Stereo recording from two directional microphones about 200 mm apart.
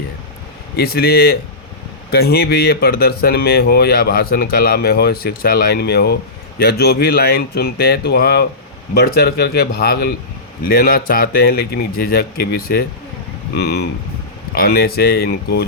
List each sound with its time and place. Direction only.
0.8 s speech: 50° left (ahead or behind)